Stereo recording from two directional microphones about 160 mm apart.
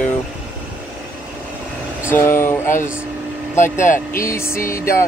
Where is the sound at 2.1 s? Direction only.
15° left (ahead or behind).